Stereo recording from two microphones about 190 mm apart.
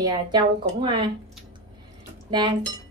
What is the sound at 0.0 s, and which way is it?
A woman's voice, 20° right (ahead or behind).